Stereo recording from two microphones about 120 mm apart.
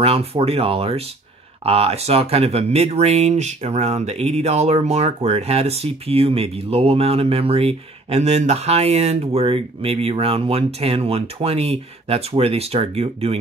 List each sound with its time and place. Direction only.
0.0 s speech: 55° right (ahead or behind)